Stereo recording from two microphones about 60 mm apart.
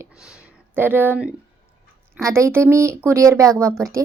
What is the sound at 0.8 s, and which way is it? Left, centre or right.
Speech, right.